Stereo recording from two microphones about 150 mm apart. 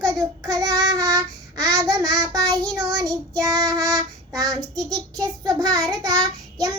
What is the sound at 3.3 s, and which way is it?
Child singing, 25° right (ahead or behind).